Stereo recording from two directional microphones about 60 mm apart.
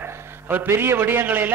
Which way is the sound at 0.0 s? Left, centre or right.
Right.